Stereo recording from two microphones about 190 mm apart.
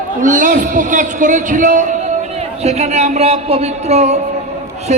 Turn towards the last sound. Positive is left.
turn(degrees=-35)  # may be behind; listen again after turning